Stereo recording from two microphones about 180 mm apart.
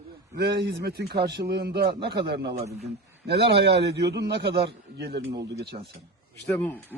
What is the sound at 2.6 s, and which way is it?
Speech, 40° right (ahead or behind).